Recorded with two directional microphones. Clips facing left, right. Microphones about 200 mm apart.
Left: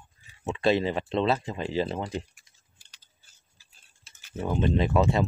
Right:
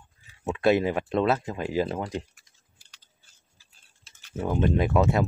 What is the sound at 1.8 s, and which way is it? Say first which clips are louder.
Speech: right 1 dB; 5° left (ahead or behind).